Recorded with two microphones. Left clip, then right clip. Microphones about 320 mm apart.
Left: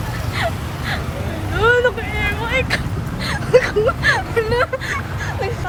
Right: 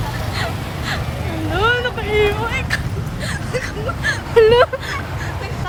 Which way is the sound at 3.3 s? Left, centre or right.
Centre.